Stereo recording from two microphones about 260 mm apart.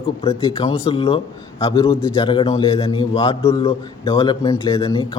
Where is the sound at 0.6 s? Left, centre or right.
Left.